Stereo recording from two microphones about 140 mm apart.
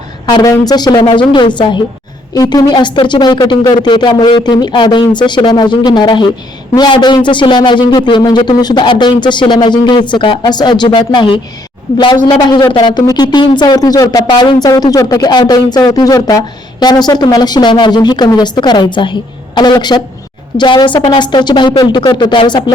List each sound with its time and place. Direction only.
0.3 s a man's voice: 30° left (ahead or behind)